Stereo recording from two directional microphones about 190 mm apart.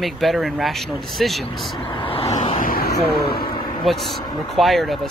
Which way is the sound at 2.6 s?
50° left (ahead or behind).